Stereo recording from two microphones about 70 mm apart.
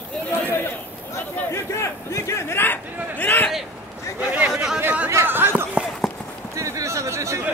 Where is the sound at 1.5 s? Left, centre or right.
Left.